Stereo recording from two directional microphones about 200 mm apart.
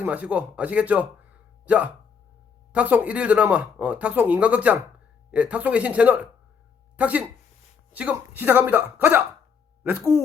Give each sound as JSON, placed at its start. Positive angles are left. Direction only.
{"t": 0.0, "sound": "a man's voice", "side_deg": -5}